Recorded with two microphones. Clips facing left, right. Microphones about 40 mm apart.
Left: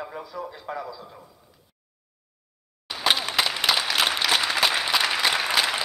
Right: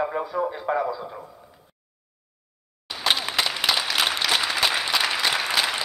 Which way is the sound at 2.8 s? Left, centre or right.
Centre.